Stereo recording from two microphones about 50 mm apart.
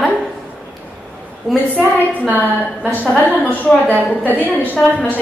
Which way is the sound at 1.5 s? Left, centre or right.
Centre.